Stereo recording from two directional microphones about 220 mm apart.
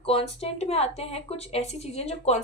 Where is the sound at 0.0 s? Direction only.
25° left (ahead or behind).